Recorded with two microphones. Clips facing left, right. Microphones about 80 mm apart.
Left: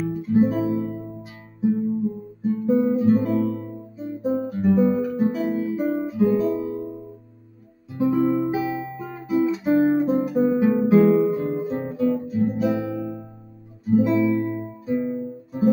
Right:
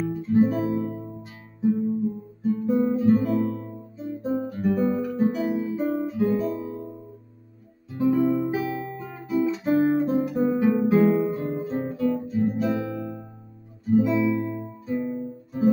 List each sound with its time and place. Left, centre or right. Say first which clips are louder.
0.0 s guitar: left 1 dB; centre
0.7 s music: left 2 dB; centre
2.4 s guitar: left 2 dB; centre
7.9 s guitar: left 1 dB; centre
12.4 s music: left 3 dB; centre
13.8 s guitar: left 2 dB; centre
14.1 s music: left 3 dB; centre
14.4 s music: left 4 dB; left
14.9 s guitar: left 3 dB; centre